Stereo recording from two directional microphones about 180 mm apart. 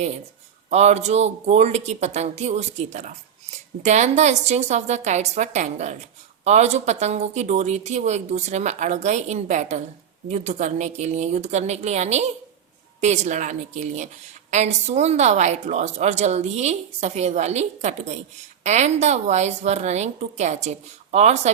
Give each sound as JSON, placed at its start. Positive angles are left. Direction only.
{"t": 0.7, "sound": "a woman's voice", "side_deg": -40}